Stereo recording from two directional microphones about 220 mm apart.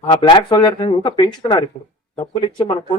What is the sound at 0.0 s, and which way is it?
Speech, 20° left (ahead or behind).